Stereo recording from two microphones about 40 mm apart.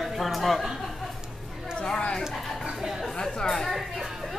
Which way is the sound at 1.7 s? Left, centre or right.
Left.